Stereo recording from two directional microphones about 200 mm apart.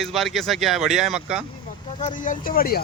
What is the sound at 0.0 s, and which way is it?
Speech, centre (ahead or behind).